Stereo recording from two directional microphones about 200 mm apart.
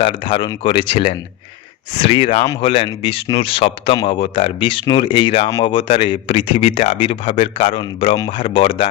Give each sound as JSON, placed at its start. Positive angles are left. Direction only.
{"t": 0.0, "sound": "speech", "side_deg": 25}
{"t": 5.5, "sound": "speech", "side_deg": 15}
{"t": 5.7, "sound": "speech", "side_deg": 25}